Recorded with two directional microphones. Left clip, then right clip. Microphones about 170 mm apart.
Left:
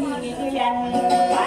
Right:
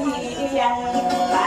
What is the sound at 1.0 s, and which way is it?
Music, 20° left (ahead or behind).